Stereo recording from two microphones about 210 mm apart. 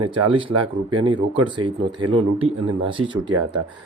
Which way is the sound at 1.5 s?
20° right (ahead or behind).